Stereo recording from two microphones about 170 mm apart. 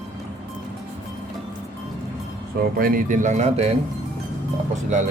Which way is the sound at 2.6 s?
60° right (ahead or behind).